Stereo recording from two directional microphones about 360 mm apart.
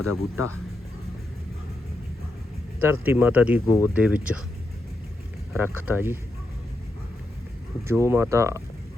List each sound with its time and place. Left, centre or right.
0.0 s speech: left
2.8 s speech: centre
5.5 s speech: centre
7.9 s speech: centre